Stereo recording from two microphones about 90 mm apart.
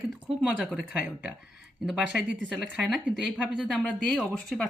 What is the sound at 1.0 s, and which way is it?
Speech, 15° right (ahead or behind).